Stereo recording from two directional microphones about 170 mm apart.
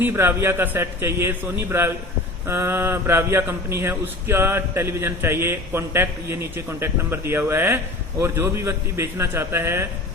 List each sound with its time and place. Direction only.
0.0 s a man's voice: 15° right (ahead or behind)